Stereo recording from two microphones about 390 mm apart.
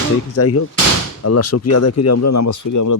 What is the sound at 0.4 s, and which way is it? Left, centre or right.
Speech, left.